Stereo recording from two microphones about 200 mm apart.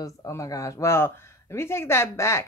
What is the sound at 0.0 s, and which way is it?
Speech, 15° left (ahead or behind).